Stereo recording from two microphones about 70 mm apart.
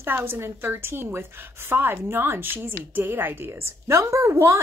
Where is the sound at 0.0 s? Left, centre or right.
Right.